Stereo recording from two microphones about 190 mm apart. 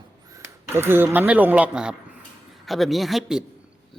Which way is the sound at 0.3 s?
10° right (ahead or behind).